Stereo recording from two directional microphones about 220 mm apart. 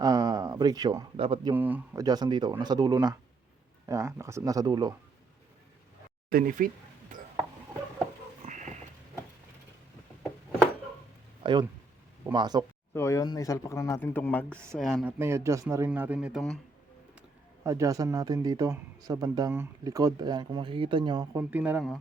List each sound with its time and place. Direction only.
0.0 s a man's voice: 15° right (ahead or behind)
1.5 s speech: 10° right (ahead or behind)
6.3 s speech: 40° right (ahead or behind)
7.1 s a sound: 35° right (ahead or behind)
8.4 s a sound: 35° right (ahead or behind)
11.4 s speech: 20° right (ahead or behind)
12.9 s speech: 10° left (ahead or behind)
15.2 s speech: 10° right (ahead or behind)
17.6 s speech: 15° right (ahead or behind)
21.5 s speech: 5° right (ahead or behind)